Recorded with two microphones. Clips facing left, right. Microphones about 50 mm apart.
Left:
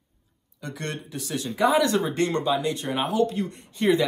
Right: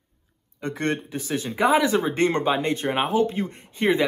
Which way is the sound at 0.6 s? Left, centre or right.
Right.